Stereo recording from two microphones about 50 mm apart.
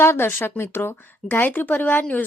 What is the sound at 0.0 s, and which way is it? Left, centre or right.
Speech, left.